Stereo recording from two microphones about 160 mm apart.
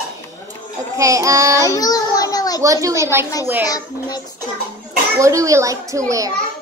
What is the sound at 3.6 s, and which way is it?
Speech, 25° left (ahead or behind).